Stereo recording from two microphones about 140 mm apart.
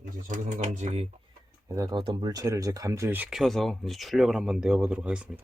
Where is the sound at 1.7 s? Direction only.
25° right (ahead or behind).